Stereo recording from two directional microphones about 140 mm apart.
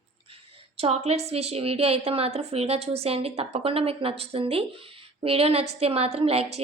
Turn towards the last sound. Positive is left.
turn(degrees=-45)  # may be behind; listen again after turning